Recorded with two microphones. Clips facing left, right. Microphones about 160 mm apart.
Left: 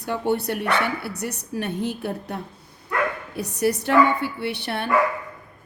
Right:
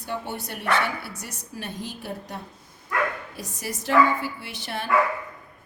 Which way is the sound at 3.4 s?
65° left (ahead or behind).